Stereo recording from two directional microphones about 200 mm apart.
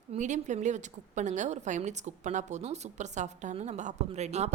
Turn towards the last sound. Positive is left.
turn(degrees=-35)  # may be behind; listen again after turning